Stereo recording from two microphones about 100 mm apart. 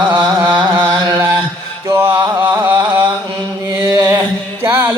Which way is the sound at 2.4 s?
20° right (ahead or behind).